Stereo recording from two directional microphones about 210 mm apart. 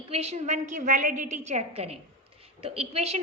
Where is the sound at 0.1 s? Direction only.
30° right (ahead or behind).